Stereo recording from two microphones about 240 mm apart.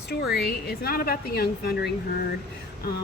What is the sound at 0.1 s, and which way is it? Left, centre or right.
A woman's voice, left.